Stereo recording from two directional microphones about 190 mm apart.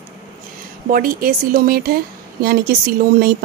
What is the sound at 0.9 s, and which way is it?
Speech, 50° right (ahead or behind).